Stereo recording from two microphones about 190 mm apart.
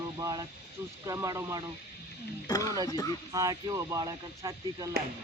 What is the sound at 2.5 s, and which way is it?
Speech, 20° left (ahead or behind).